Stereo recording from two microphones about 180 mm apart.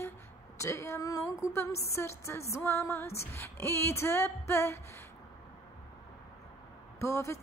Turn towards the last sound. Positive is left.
turn(degrees=15)  # may be behind; listen again after turning